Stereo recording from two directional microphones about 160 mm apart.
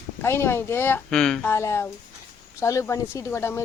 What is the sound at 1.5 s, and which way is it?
Speech, 15° left (ahead or behind).